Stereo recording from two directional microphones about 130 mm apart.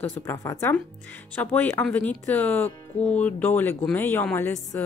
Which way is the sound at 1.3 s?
15° left (ahead or behind).